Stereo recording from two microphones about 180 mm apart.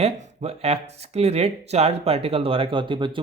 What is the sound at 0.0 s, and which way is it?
Speech, 35° right (ahead or behind).